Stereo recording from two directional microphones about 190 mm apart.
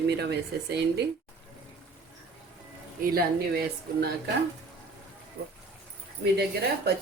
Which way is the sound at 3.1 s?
55° right (ahead or behind).